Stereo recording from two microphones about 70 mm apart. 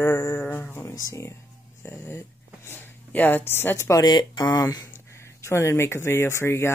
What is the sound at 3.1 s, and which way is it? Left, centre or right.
Speech, left.